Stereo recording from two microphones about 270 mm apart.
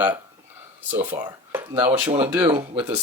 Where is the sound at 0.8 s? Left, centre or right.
Centre.